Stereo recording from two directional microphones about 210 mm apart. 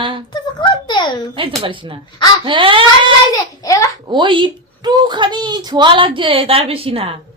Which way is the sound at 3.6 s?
15° left (ahead or behind).